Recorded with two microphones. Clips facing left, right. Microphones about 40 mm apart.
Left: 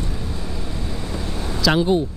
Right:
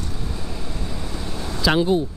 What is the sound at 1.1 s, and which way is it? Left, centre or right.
Vehicle, centre.